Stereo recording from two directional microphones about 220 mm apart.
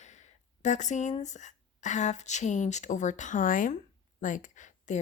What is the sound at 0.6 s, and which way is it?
Speech, 35° left (ahead or behind).